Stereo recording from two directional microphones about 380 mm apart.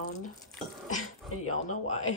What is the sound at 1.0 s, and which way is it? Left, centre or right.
Speech, left.